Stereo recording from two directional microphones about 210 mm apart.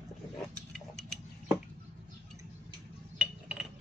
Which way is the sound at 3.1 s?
5° right (ahead or behind).